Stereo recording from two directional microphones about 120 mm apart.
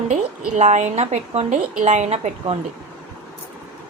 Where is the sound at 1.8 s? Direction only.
80° right.